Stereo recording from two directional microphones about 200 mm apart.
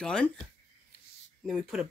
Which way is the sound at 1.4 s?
Centre (ahead or behind).